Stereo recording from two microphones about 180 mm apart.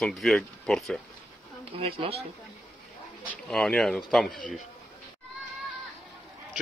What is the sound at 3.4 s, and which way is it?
Speech, 5° left (ahead or behind).